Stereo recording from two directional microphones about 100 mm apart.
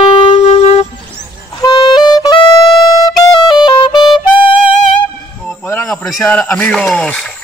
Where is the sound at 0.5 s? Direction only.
90° left.